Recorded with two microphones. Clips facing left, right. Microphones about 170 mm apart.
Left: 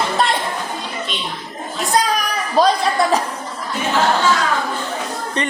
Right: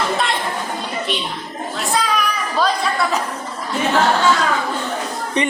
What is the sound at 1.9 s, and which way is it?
Children playing, 40° left (ahead or behind).